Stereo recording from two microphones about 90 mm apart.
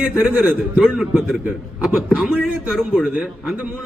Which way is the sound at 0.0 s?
10° right (ahead or behind).